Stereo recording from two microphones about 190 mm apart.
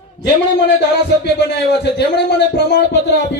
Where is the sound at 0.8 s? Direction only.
65° left (ahead or behind).